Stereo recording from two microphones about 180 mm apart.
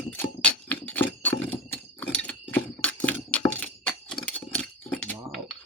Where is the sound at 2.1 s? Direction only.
10° left (ahead or behind).